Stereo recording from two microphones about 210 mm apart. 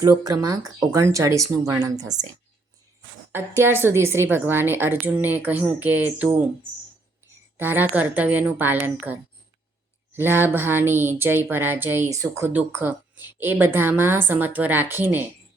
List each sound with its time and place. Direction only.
0.0 s speech: 15° right (ahead or behind)
3.3 s speech: 10° right (ahead or behind)
7.5 s speech: 10° right (ahead or behind)
10.2 s speech: 10° right (ahead or behind)